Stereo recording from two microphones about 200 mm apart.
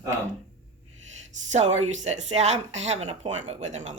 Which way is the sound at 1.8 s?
35° right (ahead or behind).